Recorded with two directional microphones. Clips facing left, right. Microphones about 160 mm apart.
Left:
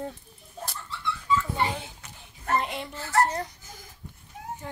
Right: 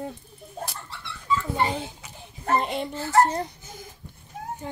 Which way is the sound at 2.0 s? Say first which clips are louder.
Right 3 dB; 10° right (ahead or behind).